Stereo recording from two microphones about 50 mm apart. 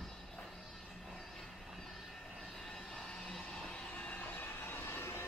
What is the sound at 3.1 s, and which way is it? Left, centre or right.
Vehicle, centre.